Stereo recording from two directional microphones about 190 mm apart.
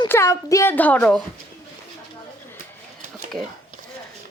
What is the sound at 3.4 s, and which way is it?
Speech, centre (ahead or behind).